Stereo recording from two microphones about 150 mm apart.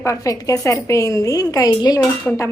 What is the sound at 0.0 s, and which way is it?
A woman's voice, 20° left (ahead or behind).